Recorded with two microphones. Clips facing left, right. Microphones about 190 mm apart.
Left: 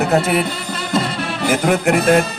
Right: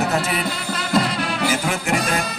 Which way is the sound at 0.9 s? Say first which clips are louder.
Even; centre (ahead or behind).